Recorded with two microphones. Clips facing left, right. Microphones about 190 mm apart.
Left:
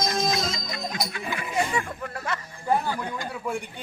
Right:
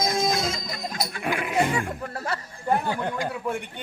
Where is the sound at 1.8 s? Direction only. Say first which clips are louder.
Right 1 dB; 35° right (ahead or behind).